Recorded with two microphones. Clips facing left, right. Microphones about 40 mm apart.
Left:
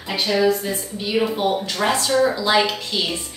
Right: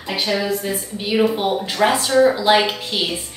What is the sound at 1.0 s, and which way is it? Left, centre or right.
Speech, centre.